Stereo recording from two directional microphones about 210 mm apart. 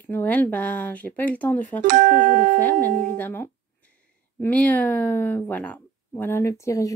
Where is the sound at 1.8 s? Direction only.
40° right (ahead or behind).